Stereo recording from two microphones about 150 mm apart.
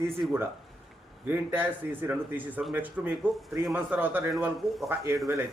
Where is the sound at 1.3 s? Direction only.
15° right (ahead or behind).